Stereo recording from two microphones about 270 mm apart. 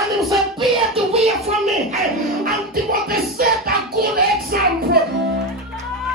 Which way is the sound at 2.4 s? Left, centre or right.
Right.